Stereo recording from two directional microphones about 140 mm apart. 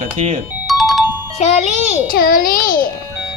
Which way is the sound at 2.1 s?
90° left.